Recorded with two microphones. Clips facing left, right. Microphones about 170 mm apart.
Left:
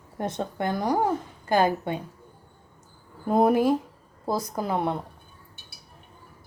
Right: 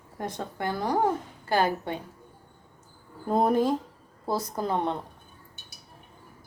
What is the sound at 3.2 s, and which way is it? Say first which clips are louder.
A woman's voice: left 3 dB; 10° left (ahead or behind).